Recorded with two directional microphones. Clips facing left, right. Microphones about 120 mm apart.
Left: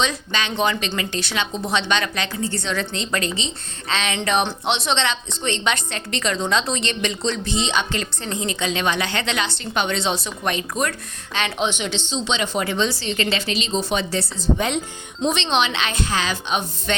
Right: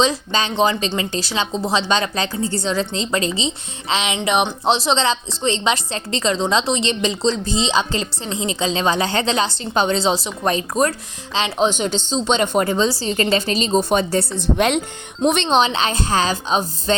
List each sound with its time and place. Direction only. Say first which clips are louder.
0.0 s a woman's voice: right 5 dB; 30° right (ahead or behind); by 4.5 s 15° right (ahead or behind)
4.6 s a woman's voice: right 4 dB; 35° right (ahead or behind); by 15.4 s 60° right (ahead or behind)
15.4 s a woman's voice: right 4 dB; 40° right (ahead or behind)